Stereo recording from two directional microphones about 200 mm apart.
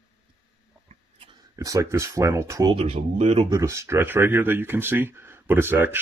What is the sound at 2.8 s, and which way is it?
Speech, 30° right (ahead or behind).